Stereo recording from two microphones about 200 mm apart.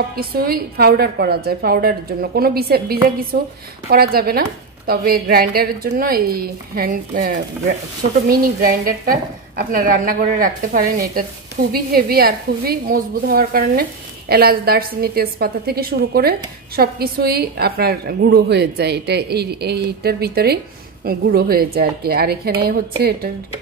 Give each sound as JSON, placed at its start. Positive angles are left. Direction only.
{"t": 0.1, "sound": "a woman's voice", "side_deg": -50}